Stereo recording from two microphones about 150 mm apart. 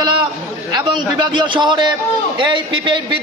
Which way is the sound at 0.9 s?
30° right (ahead or behind).